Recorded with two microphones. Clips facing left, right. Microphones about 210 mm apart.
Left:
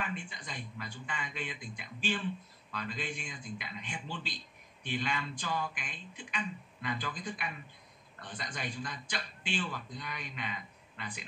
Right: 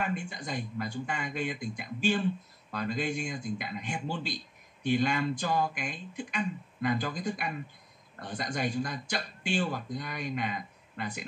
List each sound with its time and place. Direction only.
0.0 s speech: 45° right (ahead or behind)